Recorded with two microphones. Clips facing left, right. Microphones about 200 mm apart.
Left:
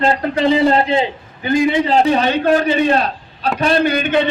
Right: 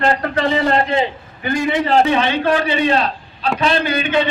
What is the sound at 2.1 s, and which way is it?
A man's voice, 40° left (ahead or behind).